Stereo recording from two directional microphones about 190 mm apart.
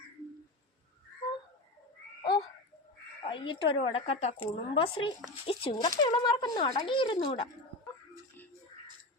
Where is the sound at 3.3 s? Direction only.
25° left (ahead or behind).